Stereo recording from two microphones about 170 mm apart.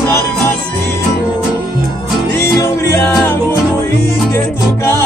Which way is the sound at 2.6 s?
15° left (ahead or behind).